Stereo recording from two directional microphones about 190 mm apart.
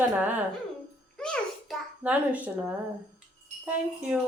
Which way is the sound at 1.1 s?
5° left (ahead or behind).